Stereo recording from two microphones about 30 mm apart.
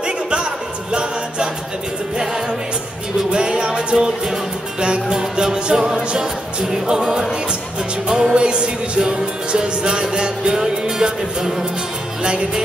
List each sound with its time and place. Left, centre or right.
0.0 s a sound: right
3.3 s music: right
3.9 s music: centre
4.7 s music: right
8.4 s music: right